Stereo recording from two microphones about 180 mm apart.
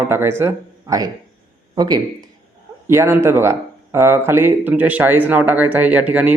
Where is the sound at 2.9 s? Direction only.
15° right (ahead or behind).